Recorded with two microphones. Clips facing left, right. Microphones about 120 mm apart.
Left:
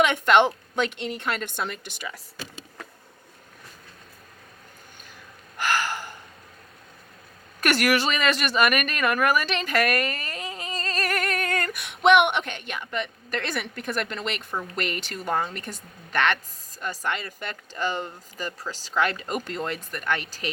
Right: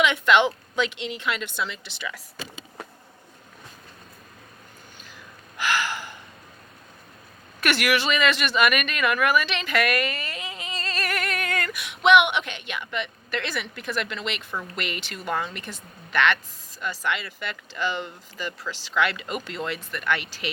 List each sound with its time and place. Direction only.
0.0 s speech: 50° left (ahead or behind)
5.5 s gasp: 45° left (ahead or behind)
7.6 s a woman's voice: 45° left (ahead or behind)